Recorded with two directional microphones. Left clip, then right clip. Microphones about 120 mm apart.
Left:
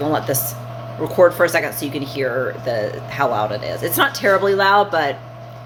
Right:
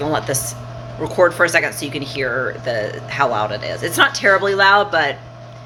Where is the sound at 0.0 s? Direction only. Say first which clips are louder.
Even; 10° left (ahead or behind).